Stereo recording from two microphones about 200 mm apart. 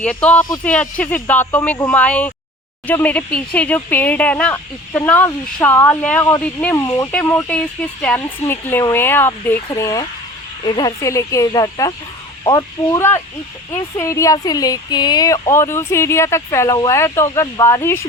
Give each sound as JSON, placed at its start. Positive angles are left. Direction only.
{"t": 0.0, "sound": "speech", "side_deg": 5}